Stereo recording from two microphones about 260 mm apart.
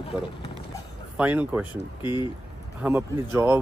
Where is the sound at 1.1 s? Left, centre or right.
Centre.